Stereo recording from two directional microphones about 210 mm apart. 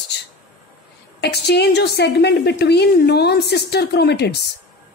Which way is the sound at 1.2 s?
50° left (ahead or behind).